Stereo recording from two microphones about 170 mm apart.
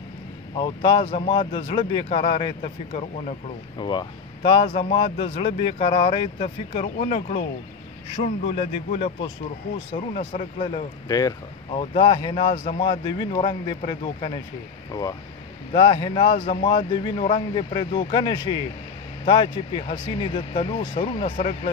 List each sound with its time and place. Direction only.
0.6 s speech: 25° left (ahead or behind)
3.7 s a man's voice: 25° left (ahead or behind)
11.1 s speech: 20° left (ahead or behind)
11.8 s speech: 30° left (ahead or behind)